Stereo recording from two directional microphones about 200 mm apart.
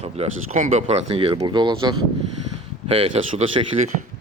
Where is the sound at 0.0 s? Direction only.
35° right (ahead or behind).